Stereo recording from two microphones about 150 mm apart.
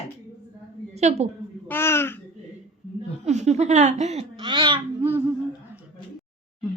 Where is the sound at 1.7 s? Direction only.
15° left (ahead or behind).